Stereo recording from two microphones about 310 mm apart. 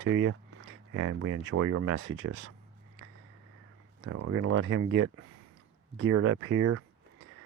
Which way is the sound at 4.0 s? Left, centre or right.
Right.